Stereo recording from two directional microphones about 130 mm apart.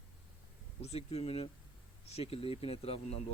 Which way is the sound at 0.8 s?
55° left (ahead or behind).